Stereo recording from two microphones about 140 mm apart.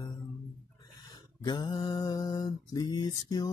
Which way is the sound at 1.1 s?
35° left (ahead or behind).